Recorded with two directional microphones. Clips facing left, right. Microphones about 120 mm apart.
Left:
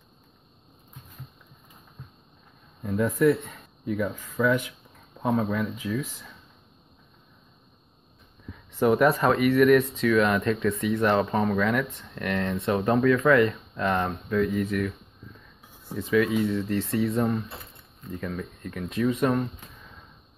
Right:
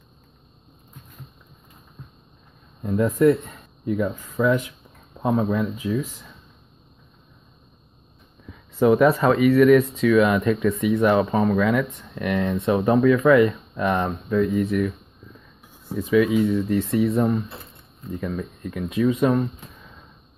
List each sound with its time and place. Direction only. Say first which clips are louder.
2.8 s speech: right 4 dB; 25° right (ahead or behind)
3.2 s a sound: right 4 dB; 35° right (ahead or behind)
4.4 s speech: right 3 dB; 25° right (ahead or behind)
8.7 s speech: right 4 dB; 5° right (ahead or behind)
12.2 s speech: right 4 dB; 15° right (ahead or behind)
16.1 s speech: right 4 dB; 10° right (ahead or behind)
16.9 s speech: right 4 dB; 25° right (ahead or behind)
18.3 s speech: right 4 dB; 10° right (ahead or behind)